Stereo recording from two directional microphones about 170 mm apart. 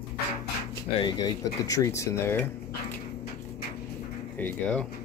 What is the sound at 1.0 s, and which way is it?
Speech, 25° left (ahead or behind).